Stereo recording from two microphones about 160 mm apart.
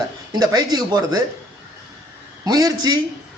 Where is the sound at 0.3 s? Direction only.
25° right (ahead or behind).